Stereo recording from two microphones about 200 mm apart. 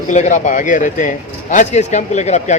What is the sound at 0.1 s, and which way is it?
Speech, 40° left (ahead or behind).